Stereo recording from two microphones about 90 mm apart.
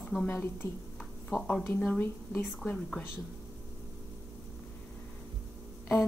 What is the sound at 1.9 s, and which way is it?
A woman's voice, 20° left (ahead or behind).